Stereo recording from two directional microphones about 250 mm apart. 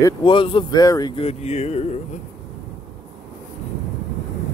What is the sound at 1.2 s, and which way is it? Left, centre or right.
Speech, left.